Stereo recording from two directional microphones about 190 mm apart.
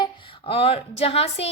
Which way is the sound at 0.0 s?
25° left (ahead or behind).